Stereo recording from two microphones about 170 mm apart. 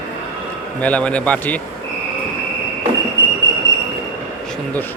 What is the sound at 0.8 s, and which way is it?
Speech, 10° left (ahead or behind).